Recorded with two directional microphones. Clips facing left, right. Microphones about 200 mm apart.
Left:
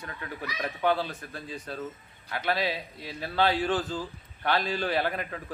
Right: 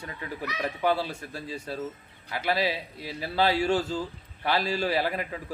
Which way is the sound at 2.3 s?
10° right (ahead or behind).